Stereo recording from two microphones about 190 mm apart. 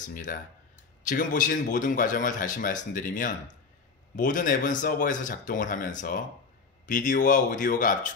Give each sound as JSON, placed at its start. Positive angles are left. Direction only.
{"t": 0.0, "sound": "a man's voice", "side_deg": 45}